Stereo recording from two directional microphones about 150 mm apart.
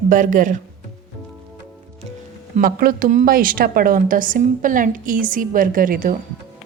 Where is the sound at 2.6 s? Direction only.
70° right (ahead or behind).